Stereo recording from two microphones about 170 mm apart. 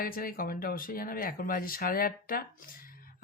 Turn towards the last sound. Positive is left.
turn(degrees=55)  # may be behind; listen again after turning